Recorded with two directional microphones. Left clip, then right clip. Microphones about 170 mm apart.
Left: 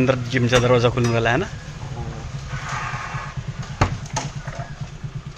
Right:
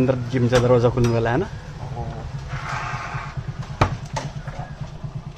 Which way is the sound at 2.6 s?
Centre (ahead or behind).